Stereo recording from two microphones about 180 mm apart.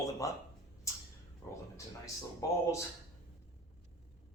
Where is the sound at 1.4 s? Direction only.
20° left (ahead or behind).